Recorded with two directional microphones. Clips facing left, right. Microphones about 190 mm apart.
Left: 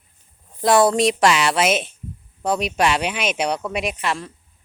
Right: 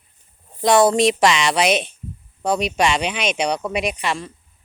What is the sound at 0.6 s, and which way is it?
Speech, centre (ahead or behind).